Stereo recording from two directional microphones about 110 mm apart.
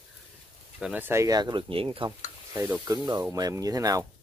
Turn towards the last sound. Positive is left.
turn(degrees=-30)  # may be behind; listen again after turning